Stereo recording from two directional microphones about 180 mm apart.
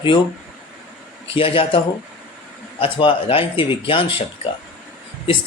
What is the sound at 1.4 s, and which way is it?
Speech, 30° left (ahead or behind).